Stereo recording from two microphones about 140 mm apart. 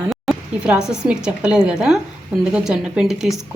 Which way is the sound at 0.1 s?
5° right (ahead or behind).